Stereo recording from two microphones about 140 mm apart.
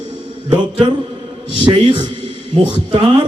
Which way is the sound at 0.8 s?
35° right (ahead or behind).